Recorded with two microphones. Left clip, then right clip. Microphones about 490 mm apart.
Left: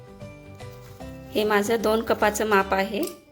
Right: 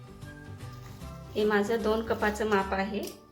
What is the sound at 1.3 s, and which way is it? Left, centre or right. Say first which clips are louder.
A woman's voice: left 5 dB; centre.